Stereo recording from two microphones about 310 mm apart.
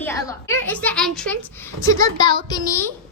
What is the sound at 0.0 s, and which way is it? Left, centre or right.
A woman's voice, centre.